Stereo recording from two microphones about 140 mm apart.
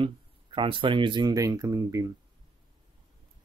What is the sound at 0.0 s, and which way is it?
Speech, 35° right (ahead or behind).